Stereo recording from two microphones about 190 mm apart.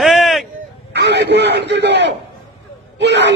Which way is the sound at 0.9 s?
65° right (ahead or behind).